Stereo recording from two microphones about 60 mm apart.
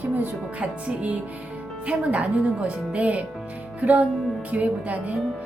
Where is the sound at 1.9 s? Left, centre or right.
Right.